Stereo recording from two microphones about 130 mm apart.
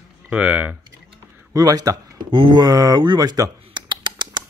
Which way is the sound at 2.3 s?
40° right (ahead or behind).